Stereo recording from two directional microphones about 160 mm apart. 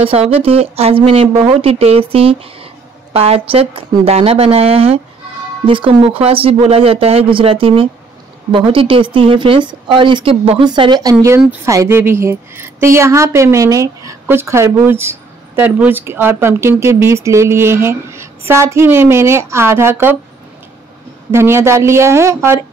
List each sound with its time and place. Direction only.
0.0 s a woman's voice: 35° right (ahead or behind); by 20.2 s 15° right (ahead or behind)
21.3 s a woman's voice: 15° right (ahead or behind)